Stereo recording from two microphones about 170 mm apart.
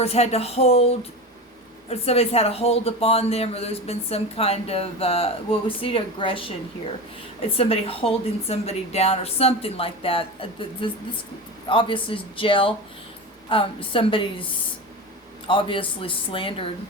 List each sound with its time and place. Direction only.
0.0 s speech: 40° left (ahead or behind)
7.5 s speech: 35° left (ahead or behind)
15.4 s speech: 30° left (ahead or behind)